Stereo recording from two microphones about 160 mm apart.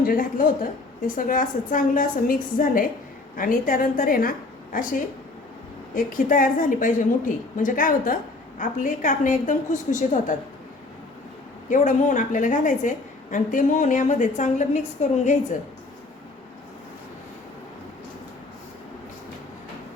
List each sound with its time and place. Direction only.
0.0 s a woman's voice: 60° left (ahead or behind)
11.7 s a woman's voice: 50° left (ahead or behind)